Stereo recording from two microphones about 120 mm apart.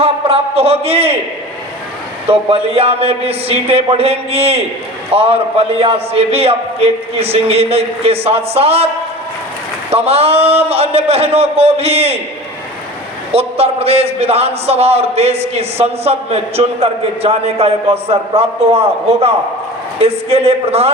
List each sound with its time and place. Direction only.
0.0 s a man's voice: 55° right (ahead or behind)
2.3 s a man's voice: 55° right (ahead or behind)
9.9 s a man's voice: 55° right (ahead or behind)
13.3 s a man's voice: 55° right (ahead or behind)